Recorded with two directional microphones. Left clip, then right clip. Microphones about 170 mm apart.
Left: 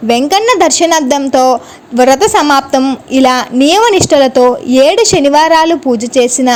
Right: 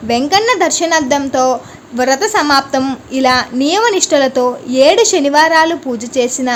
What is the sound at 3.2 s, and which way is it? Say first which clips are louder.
A woman's voice: left 3 dB; 40° left (ahead or behind).